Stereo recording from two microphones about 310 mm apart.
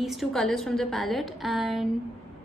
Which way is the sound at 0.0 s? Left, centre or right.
Centre.